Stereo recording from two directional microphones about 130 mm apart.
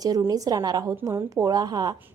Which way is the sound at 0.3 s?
30° right (ahead or behind).